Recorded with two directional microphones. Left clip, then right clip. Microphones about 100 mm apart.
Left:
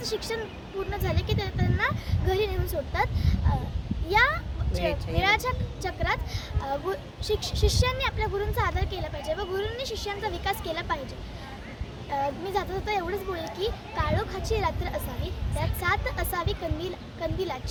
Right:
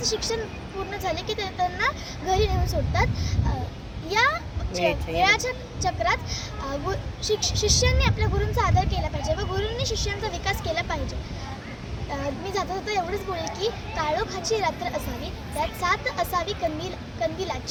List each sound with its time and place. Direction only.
0.0 s speech: 50° left (ahead or behind)
12.5 s speech: 40° left (ahead or behind)